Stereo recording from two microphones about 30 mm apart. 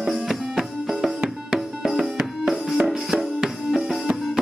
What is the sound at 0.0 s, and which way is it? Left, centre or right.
Music, centre.